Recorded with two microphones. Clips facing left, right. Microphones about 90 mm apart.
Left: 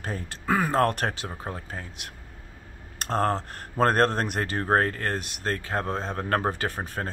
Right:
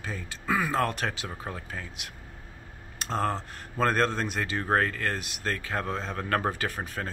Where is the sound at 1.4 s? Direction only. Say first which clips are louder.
Left 2 dB; 30° left (ahead or behind).